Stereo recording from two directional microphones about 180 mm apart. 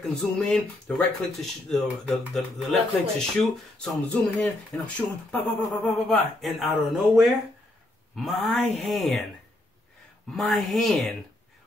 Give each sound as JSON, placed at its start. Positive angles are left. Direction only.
{"t": 0.0, "sound": "speech", "side_deg": 0}
{"t": 10.3, "sound": "speech", "side_deg": 0}